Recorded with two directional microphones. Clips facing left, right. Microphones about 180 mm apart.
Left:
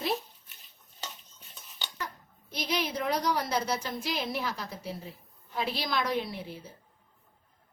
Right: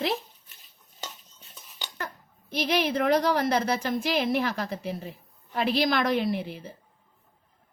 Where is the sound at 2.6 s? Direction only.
60° right (ahead or behind).